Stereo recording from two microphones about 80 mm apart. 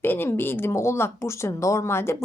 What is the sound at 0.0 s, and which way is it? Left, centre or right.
Speech, left.